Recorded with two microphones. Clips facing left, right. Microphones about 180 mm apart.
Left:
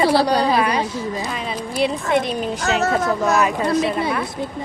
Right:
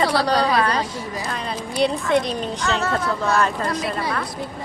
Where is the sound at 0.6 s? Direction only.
10° left (ahead or behind).